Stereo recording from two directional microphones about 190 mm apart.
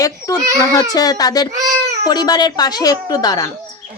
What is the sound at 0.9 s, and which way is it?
A woman's voice, 20° left (ahead or behind).